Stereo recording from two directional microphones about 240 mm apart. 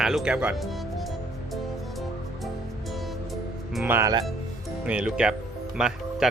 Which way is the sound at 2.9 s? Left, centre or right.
Centre.